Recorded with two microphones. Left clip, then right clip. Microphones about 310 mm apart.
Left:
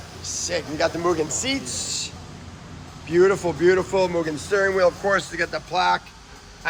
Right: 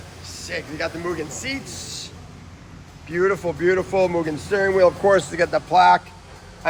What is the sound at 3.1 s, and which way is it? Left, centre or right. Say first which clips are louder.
Speech: left 2 dB; centre.